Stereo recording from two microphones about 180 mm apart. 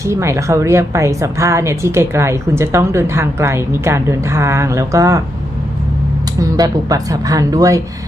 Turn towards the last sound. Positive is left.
turn(degrees=-20)  # may be behind; listen again after turning